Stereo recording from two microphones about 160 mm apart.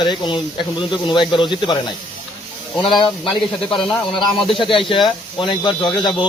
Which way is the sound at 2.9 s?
30° left (ahead or behind).